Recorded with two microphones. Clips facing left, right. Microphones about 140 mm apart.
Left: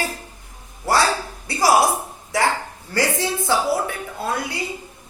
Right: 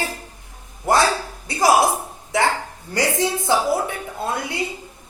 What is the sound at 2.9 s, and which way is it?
A woman's voice, 20° right (ahead or behind).